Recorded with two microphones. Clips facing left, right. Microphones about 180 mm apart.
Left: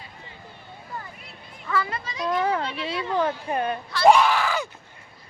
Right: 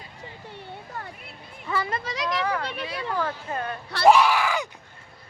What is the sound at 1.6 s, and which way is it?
Speech, 25° right (ahead or behind).